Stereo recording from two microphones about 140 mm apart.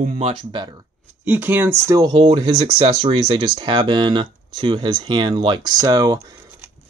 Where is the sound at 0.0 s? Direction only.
55° right (ahead or behind).